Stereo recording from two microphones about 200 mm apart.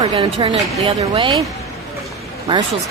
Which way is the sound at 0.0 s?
25° right (ahead or behind).